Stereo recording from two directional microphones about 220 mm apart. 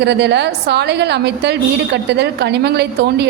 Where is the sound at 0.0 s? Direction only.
50° right (ahead or behind).